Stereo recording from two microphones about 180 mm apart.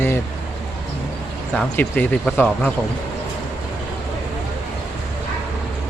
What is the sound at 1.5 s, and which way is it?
Speech, 5° left (ahead or behind).